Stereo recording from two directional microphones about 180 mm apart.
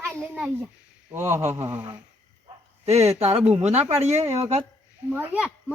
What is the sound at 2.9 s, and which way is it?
Speech, 35° right (ahead or behind).